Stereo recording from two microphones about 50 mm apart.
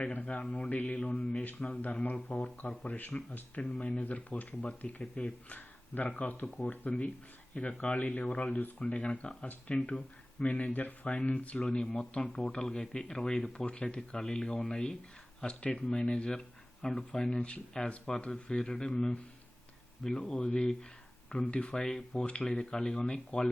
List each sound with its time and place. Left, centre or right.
0.0 s speech: left
0.7 s mantra: left
0.9 s speech: left
1.8 s speech: left
4.0 s speech: left
5.5 s a sound: left
6.6 s speech: left
7.5 s speech: left